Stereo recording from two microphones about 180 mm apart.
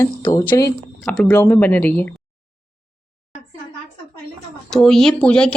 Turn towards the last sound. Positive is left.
turn(degrees=5)  # may be behind; listen again after turning